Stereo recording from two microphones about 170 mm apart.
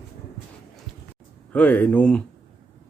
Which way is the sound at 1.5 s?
10° left (ahead or behind).